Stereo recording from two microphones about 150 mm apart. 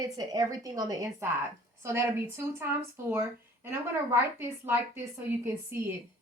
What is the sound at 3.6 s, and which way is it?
A woman's voice, 15° right (ahead or behind).